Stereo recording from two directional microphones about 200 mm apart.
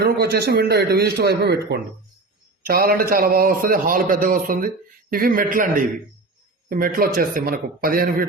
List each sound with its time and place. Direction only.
0.0 s a man's voice: 55° right (ahead or behind)